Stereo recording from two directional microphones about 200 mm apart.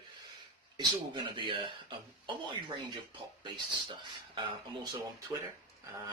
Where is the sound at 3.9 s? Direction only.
25° right (ahead or behind).